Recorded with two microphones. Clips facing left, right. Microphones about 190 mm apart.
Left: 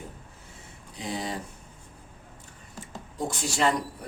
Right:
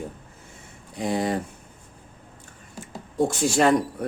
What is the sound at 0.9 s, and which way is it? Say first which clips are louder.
Speech: right 8 dB; 55° right (ahead or behind).